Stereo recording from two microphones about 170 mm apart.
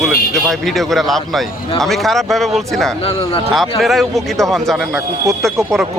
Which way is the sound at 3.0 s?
35° left (ahead or behind).